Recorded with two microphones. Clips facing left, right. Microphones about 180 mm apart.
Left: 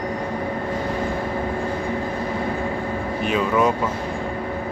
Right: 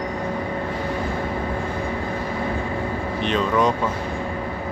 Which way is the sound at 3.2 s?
10° left (ahead or behind).